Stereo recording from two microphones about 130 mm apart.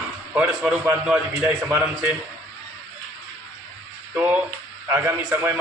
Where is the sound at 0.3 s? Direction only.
10° right (ahead or behind).